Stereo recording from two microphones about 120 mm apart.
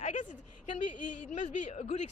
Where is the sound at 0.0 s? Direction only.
90° left.